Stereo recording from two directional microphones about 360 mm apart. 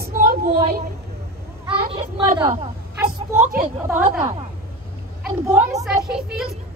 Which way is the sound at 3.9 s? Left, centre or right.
Centre.